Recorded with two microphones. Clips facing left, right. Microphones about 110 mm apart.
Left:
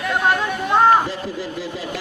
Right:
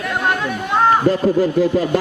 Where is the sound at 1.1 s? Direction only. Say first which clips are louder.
Right 12 dB; 50° right (ahead or behind).